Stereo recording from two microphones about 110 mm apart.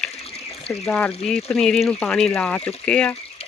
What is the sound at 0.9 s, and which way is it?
Speech, 10° left (ahead or behind).